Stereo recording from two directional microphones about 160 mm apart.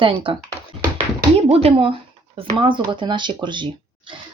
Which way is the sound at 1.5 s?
40° right (ahead or behind).